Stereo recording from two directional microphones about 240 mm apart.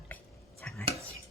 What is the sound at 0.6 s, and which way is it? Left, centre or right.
Chopping, centre.